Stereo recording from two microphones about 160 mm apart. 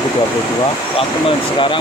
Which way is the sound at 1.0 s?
35° left (ahead or behind).